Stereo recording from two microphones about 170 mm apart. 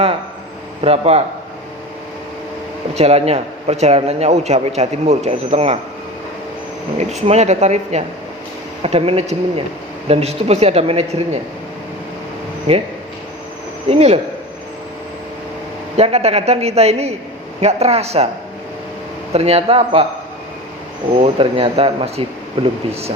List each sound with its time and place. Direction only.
0.8 s a man's voice: 35° right (ahead or behind)
2.9 s a man's voice: 40° right (ahead or behind)
7.1 s a man's voice: 40° right (ahead or behind)
12.7 s a man's voice: 35° right (ahead or behind)
13.9 s a man's voice: 40° right (ahead or behind)
16.0 s a man's voice: 40° right (ahead or behind)
19.3 s a man's voice: 35° right (ahead or behind)
21.2 s a man's voice: 35° right (ahead or behind)